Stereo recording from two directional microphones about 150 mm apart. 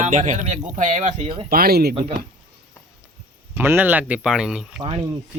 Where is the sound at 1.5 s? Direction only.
85° right.